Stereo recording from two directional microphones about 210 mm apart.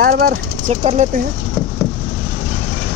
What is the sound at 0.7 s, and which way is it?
Speech, 30° right (ahead or behind).